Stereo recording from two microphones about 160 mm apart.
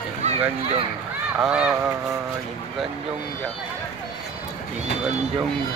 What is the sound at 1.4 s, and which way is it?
Speech, 5° right (ahead or behind).